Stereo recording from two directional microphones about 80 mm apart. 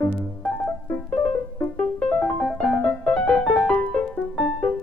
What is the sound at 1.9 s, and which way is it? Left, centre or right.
Music, centre.